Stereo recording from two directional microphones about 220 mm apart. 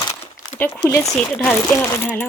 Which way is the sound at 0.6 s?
10° left (ahead or behind).